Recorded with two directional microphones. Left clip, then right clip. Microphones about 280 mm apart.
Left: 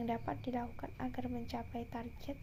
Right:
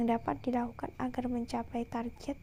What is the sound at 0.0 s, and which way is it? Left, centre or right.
A woman's voice, right.